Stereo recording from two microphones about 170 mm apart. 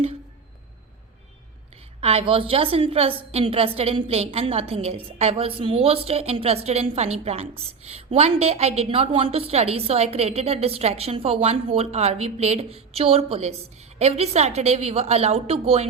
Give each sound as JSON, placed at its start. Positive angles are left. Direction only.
{"t": 2.0, "sound": "a woman's voice", "side_deg": -35}